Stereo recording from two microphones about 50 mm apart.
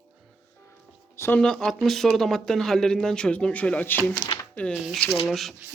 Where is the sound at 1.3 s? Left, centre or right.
Centre.